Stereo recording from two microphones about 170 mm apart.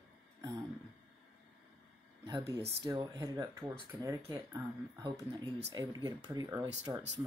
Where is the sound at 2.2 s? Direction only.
20° right (ahead or behind).